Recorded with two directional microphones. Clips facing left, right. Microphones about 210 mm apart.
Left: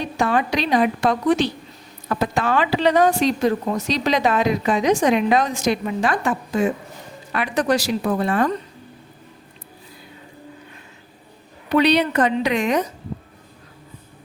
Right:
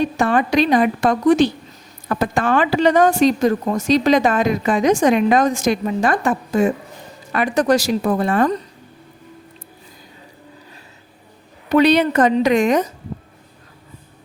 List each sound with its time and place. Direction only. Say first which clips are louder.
0.2 s speech: right 2 dB; 50° right (ahead or behind)
11.7 s speech: right 3 dB; 45° right (ahead or behind)